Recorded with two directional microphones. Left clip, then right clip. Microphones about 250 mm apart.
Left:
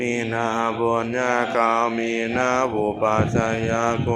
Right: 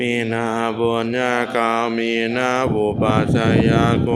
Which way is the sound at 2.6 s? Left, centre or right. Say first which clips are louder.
Right 2 dB; right.